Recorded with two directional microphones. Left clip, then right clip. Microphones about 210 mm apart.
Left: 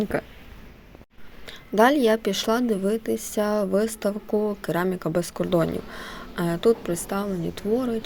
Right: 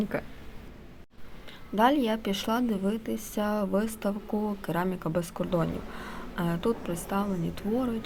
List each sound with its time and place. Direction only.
0.0 s speech: 20° left (ahead or behind)
1.5 s speech: 25° left (ahead or behind)